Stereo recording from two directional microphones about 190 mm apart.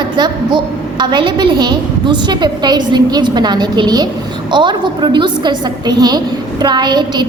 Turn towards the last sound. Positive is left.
turn(degrees=-25)  # may be behind; listen again after turning